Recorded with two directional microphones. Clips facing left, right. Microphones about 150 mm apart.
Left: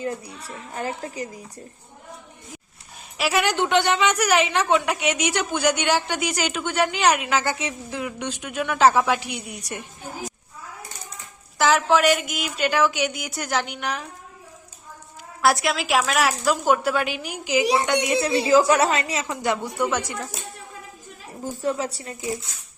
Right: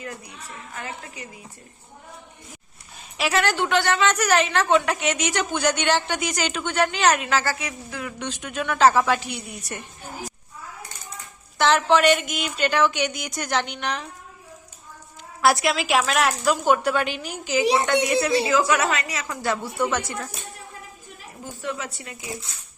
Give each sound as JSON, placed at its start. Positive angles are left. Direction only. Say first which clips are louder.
{"t": 0.0, "sound": "a woman's voice", "louder": "left 7 dB", "side_deg": 30}
{"t": 3.2, "sound": "a woman's voice", "louder": "even", "side_deg": 5}
{"t": 3.4, "sound": "speech", "louder": "left 3 dB", "side_deg": 20}
{"t": 11.5, "sound": "a woman's voice", "louder": "even", "side_deg": 5}
{"t": 15.4, "sound": "a woman's voice", "louder": "right 1 dB", "side_deg": 0}
{"t": 18.4, "sound": "a woman's voice", "louder": "left 4 dB", "side_deg": 35}
{"t": 21.6, "sound": "a woman's voice", "louder": "left 5 dB", "side_deg": 35}